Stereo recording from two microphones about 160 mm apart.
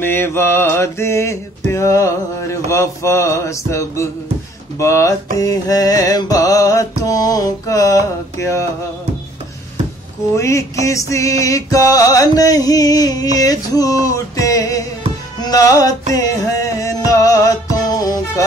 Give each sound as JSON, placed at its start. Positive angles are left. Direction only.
{"t": 0.0, "sound": "music", "side_deg": 15}
{"t": 10.3, "sound": "music", "side_deg": 20}